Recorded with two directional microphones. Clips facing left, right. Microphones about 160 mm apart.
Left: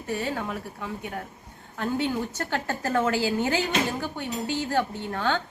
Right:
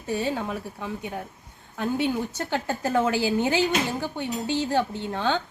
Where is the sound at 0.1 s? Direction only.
20° right (ahead or behind).